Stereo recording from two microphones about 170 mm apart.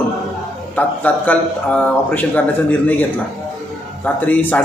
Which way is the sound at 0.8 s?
10° left (ahead or behind).